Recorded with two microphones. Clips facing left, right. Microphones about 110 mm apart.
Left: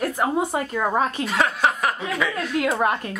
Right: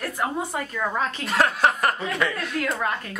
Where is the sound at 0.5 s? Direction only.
30° left (ahead or behind).